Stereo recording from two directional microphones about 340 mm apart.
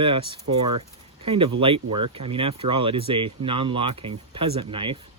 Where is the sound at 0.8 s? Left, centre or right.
Centre.